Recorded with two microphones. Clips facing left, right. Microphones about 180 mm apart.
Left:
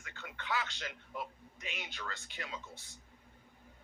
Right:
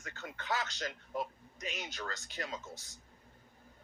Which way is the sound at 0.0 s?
40° right (ahead or behind).